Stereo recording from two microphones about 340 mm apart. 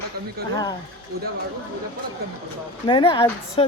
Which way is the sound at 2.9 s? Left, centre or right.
Centre.